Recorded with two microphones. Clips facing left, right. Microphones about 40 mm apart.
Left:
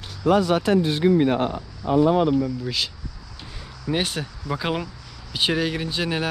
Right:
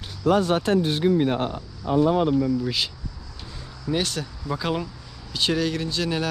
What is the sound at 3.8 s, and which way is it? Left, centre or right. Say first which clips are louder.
Speech: left 1 dB; left.